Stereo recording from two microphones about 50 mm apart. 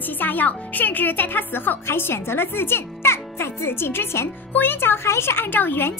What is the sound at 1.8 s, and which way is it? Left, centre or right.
Speech, left.